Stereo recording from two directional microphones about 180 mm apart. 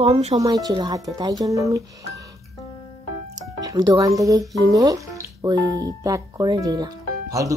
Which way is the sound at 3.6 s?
20° right (ahead or behind).